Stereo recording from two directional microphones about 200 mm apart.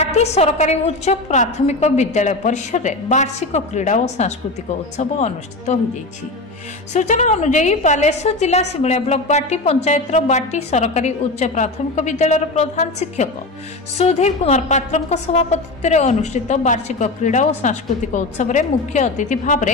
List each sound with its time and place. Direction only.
0.0 s a woman's voice: 35° left (ahead or behind)
6.9 s a woman's voice: 35° left (ahead or behind)